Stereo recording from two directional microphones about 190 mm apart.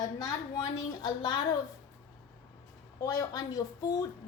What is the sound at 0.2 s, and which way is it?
Speech, 20° left (ahead or behind).